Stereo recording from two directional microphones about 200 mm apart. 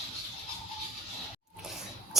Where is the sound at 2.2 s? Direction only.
Centre (ahead or behind).